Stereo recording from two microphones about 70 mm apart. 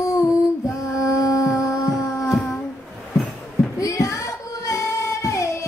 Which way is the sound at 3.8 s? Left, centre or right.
Left.